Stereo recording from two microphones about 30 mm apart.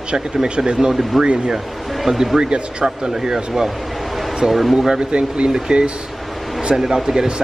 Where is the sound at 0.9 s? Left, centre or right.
Centre.